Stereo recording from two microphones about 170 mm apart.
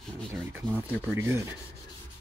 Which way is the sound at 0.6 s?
10° right (ahead or behind).